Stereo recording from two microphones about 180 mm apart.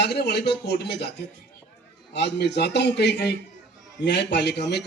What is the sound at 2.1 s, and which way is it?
A man's voice, 70° left (ahead or behind).